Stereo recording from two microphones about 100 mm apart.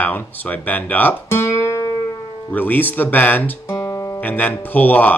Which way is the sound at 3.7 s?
30° left (ahead or behind).